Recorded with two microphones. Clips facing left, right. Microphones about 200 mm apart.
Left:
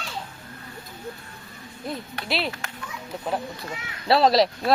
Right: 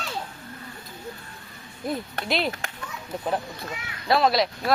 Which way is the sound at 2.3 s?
5° left (ahead or behind).